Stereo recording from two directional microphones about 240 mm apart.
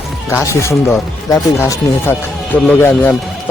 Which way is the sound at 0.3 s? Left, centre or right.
Centre.